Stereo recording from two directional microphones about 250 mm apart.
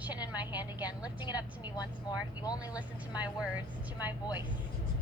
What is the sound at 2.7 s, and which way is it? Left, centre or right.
Speech, centre.